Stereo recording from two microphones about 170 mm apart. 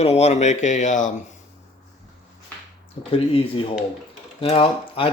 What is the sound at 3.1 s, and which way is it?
Speech, 35° left (ahead or behind).